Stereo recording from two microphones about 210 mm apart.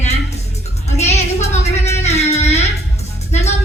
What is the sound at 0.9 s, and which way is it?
Speech, 30° left (ahead or behind).